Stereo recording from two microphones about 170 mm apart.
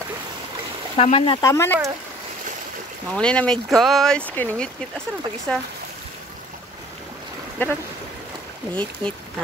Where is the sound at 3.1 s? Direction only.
5° left (ahead or behind).